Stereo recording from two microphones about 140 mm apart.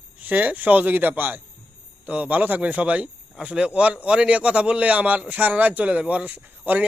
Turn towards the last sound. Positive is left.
turn(degrees=-10)  # may be behind; listen again after turning